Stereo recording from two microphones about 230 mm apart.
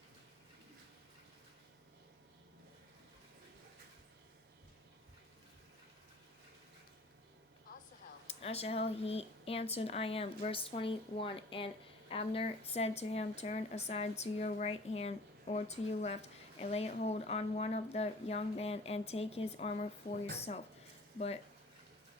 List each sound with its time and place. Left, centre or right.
8.3 s speech: left